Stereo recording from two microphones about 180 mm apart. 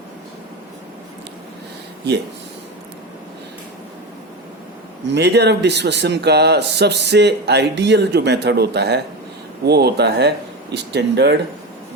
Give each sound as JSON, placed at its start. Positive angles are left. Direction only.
{"t": 5.0, "sound": "a man's voice", "side_deg": -70}